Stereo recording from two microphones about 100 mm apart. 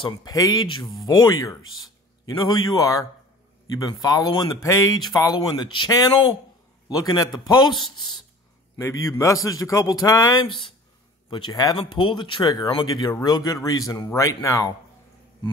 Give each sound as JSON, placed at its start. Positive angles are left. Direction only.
{"t": 0.3, "sound": "speech", "side_deg": 40}
{"t": 8.7, "sound": "speech", "side_deg": 30}
{"t": 10.4, "sound": "speech", "side_deg": 60}
{"t": 11.7, "sound": "speech", "side_deg": 55}
{"t": 13.1, "sound": "speech", "side_deg": 35}